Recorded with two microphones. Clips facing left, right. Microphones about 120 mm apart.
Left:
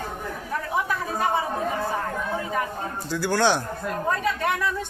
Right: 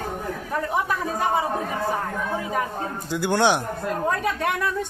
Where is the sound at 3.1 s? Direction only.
20° right (ahead or behind).